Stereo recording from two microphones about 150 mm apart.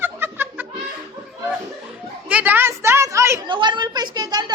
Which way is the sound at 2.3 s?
10° right (ahead or behind).